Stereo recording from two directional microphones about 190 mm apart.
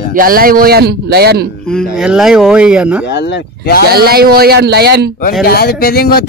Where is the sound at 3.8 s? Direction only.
55° right (ahead or behind).